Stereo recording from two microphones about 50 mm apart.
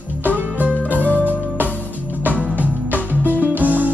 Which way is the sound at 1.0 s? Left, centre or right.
Left.